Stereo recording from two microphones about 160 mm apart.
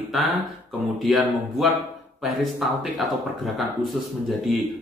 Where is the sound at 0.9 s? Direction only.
Centre (ahead or behind).